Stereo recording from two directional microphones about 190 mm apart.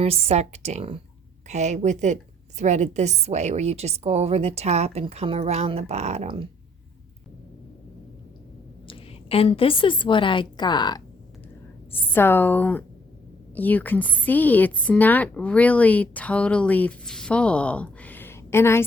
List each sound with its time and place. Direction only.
0.0 s a woman's voice: 30° right (ahead or behind)
8.9 s a woman's voice: 30° left (ahead or behind)
12.1 s a woman's voice: 10° left (ahead or behind)